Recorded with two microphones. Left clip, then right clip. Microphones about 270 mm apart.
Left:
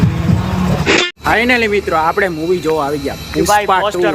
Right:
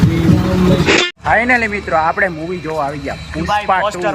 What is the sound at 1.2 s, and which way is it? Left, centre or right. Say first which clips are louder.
Speech: even; centre.